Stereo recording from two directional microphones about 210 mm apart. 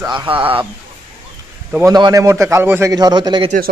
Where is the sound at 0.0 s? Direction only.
20° right (ahead or behind).